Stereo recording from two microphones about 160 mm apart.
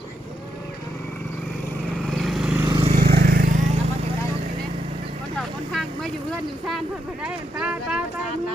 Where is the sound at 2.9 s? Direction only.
85° right.